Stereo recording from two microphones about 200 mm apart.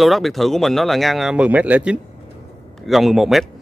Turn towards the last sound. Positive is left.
turn(degrees=0)  # may be behind; listen again after turning